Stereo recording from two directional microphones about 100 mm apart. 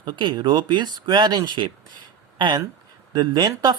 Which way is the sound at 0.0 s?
50° right (ahead or behind).